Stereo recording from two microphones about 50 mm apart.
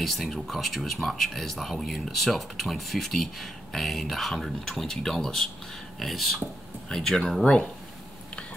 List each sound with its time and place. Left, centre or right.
0.0 s speech: centre
7.4 s speech: left